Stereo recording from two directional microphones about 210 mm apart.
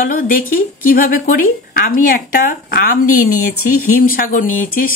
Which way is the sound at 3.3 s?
90° left.